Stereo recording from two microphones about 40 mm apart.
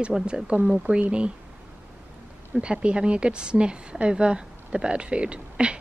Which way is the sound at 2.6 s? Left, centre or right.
Right.